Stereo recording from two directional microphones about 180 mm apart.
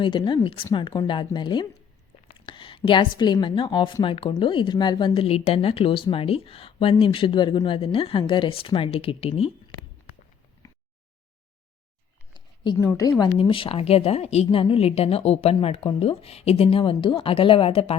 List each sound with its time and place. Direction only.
0.0 s a woman's voice: 25° left (ahead or behind)
10.6 s a sound: 20° left (ahead or behind)
12.7 s a woman's voice: 15° left (ahead or behind); by 17.9 s 30° left (ahead or behind)